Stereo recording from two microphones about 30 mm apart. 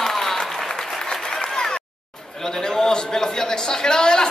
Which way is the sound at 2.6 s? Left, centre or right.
Centre.